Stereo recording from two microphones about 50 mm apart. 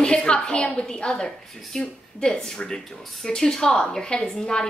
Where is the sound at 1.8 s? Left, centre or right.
Centre.